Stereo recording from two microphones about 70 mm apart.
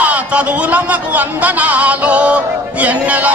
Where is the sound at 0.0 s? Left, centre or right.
Centre.